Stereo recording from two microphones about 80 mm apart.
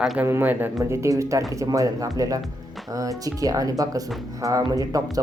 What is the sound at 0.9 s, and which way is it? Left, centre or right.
A man's voice, right.